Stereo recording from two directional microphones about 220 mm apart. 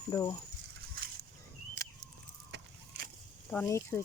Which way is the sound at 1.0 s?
40° right (ahead or behind).